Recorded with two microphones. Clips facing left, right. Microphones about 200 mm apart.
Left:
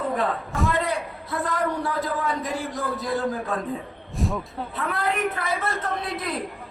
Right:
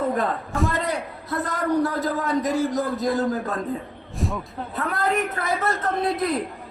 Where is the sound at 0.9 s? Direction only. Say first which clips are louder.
Right 1 dB; 40° right (ahead or behind).